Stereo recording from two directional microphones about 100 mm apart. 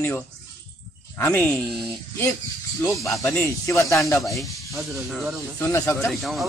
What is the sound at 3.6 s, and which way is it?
Speech, 30° left (ahead or behind).